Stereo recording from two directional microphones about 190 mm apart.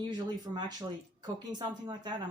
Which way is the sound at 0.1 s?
20° right (ahead or behind).